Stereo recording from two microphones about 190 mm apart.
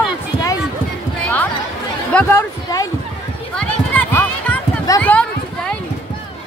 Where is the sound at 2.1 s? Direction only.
10° left (ahead or behind).